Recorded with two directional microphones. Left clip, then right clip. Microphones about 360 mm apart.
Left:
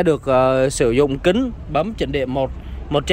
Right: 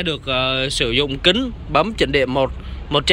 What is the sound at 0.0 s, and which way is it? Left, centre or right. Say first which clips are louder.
A man's voice: left 5 dB; centre.